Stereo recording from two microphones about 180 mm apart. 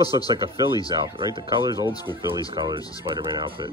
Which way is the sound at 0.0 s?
20° left (ahead or behind).